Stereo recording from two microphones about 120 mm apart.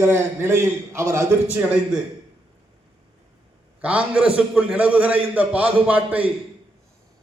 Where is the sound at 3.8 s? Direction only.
10° right (ahead or behind).